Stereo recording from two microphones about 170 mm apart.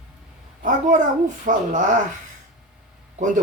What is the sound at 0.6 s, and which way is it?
Speech, 50° right (ahead or behind).